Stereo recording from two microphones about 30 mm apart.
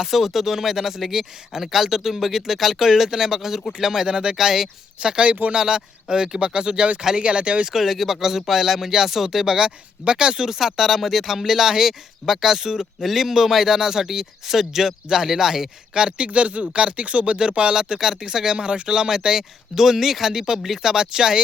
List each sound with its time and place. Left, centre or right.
0.0 s speech: centre; by 4.4 s right
4.4 s speech: centre
5.0 s speech: right
5.5 s speech: right
7.7 s speech: centre
10.1 s speech: right
16.2 s speech: right
17.7 s speech: right
18.5 s speech: right
18.9 s speech: right
20.8 s speech: right